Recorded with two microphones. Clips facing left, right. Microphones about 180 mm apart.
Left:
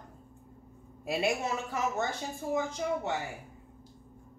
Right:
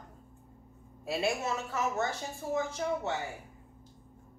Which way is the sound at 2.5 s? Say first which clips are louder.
Left 1 dB; 15° left (ahead or behind).